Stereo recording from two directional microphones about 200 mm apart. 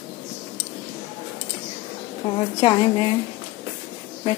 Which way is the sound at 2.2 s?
35° left (ahead or behind).